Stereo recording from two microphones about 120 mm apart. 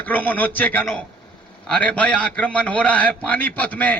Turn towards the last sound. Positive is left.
turn(degrees=15)  # may be behind; listen again after turning